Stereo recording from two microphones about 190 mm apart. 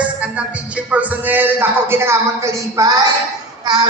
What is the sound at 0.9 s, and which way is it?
Speech, 10° right (ahead or behind).